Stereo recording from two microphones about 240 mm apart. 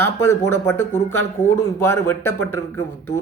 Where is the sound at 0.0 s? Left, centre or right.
Centre.